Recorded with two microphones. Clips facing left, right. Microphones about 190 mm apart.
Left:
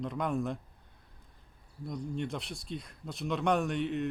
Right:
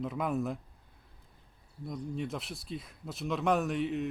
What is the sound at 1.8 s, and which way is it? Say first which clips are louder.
Speech: left 1 dB; centre (ahead or behind).